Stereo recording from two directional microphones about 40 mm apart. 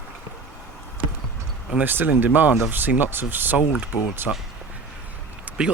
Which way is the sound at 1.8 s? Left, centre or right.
Right.